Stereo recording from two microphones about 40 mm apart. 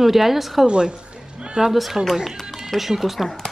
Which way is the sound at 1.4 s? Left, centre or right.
Centre.